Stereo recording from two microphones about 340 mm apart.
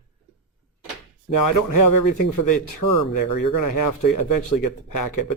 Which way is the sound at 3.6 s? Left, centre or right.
Left.